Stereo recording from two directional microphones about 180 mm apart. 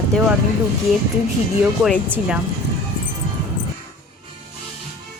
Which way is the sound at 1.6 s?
5° right (ahead or behind).